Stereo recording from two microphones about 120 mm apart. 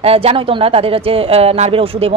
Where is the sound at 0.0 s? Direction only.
55° right (ahead or behind).